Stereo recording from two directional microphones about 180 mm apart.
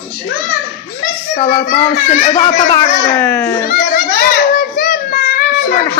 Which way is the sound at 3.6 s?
50° left (ahead or behind).